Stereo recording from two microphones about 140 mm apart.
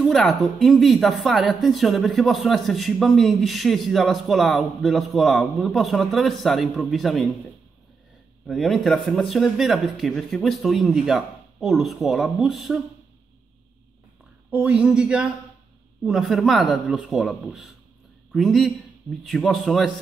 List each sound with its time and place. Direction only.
0.1 s speech: centre (ahead or behind)
8.5 s speech: centre (ahead or behind)
14.5 s speech: 10° right (ahead or behind)